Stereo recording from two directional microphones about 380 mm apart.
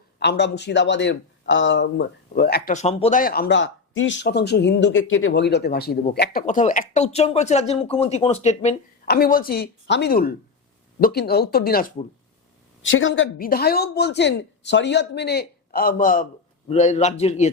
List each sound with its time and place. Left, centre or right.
0.2 s a man's voice: left